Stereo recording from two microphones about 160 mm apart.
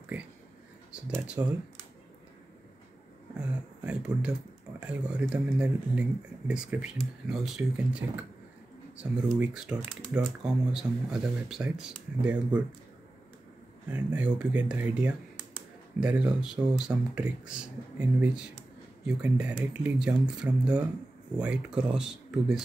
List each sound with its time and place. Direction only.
1.2 s speech: 5° right (ahead or behind)
3.3 s a sound: 5° right (ahead or behind)
5.3 s speech: 5° right (ahead or behind)
13.8 s speech: 10° right (ahead or behind)